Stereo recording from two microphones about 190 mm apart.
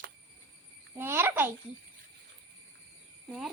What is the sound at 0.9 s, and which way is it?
Speech, 10° right (ahead or behind).